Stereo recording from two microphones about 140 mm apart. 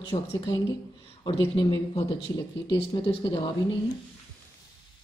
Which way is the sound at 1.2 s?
35° left (ahead or behind).